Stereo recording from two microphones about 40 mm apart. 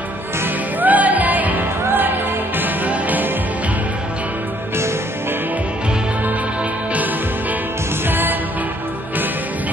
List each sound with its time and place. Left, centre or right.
0.7 s music: right
1.9 s music: right
8.1 s music: right